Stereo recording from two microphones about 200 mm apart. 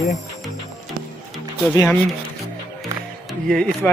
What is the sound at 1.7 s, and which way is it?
Speech, 15° left (ahead or behind).